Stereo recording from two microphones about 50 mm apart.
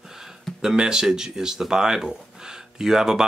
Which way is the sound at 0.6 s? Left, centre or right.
Centre.